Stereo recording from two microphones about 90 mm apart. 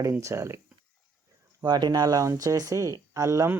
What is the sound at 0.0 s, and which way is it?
Speech, 35° right (ahead or behind).